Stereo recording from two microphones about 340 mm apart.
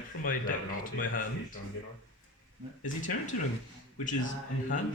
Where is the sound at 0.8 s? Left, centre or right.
Left.